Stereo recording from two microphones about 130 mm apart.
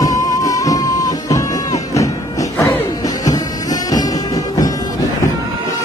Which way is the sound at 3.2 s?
30° left (ahead or behind).